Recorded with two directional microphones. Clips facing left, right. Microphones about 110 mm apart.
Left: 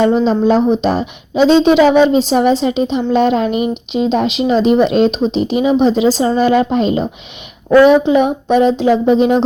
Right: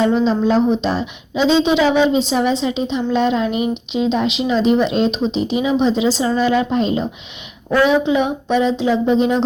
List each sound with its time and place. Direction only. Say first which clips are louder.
0.1 s a woman's voice: left 3 dB; 50° left (ahead or behind)
7.8 s a woman's voice: left 6 dB; 50° left (ahead or behind)